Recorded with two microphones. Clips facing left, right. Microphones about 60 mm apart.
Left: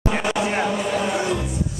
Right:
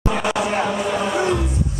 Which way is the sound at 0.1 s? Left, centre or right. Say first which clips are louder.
Right 1 dB; left.